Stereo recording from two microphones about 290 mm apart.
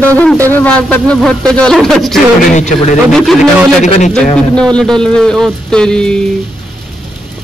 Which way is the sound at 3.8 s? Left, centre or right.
Left.